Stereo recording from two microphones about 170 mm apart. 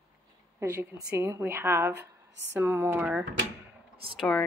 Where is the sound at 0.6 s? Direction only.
15° right (ahead or behind).